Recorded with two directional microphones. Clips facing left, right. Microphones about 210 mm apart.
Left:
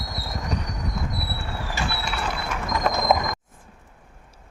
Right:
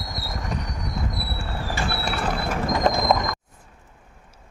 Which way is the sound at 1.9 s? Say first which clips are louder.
Right 3 dB; 40° right (ahead or behind).